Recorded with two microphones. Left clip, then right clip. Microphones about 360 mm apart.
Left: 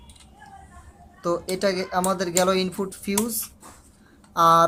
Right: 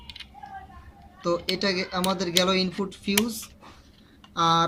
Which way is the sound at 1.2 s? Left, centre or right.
Centre.